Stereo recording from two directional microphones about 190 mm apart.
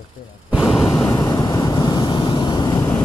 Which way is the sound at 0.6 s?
15° left (ahead or behind).